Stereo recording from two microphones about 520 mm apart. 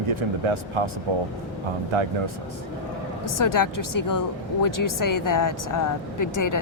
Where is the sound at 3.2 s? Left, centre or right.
Left.